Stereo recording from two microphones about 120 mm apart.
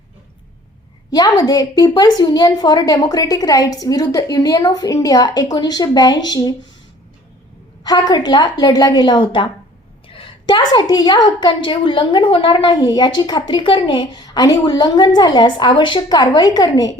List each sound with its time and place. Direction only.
1.1 s a woman's voice: 35° left (ahead or behind)
7.9 s a woman's voice: 35° left (ahead or behind)